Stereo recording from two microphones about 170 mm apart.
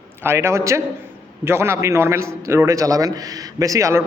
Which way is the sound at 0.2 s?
15° right (ahead or behind).